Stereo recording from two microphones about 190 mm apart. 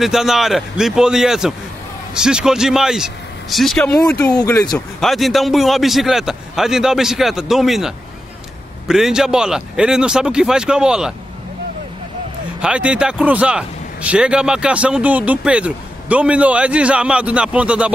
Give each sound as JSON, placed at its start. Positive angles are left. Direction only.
{"t": 0.0, "sound": "a man's voice", "side_deg": 0}
{"t": 4.3, "sound": "speech", "side_deg": 20}
{"t": 4.7, "sound": "a man's voice", "side_deg": 0}
{"t": 12.6, "sound": "speech", "side_deg": -5}